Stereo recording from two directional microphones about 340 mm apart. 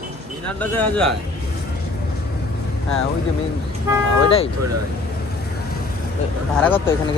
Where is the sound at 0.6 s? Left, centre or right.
Centre.